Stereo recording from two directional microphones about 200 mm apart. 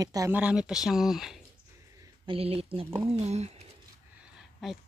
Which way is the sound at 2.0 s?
25° right (ahead or behind).